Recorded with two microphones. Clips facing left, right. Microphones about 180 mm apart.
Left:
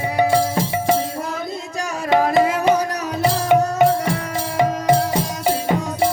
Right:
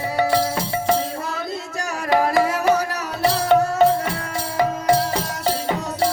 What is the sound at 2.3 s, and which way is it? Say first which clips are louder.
Music: left 2 dB; 20° left (ahead or behind).